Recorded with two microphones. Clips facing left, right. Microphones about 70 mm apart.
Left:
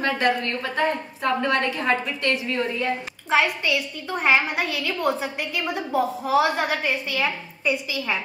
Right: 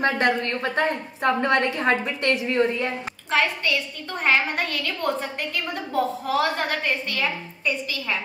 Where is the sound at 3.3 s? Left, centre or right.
Centre.